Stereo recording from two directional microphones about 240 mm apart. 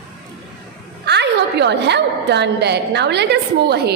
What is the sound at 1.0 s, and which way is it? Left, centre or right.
A woman's voice, right.